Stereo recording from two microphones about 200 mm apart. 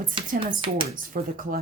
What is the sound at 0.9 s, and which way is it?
Speech, 45° right (ahead or behind).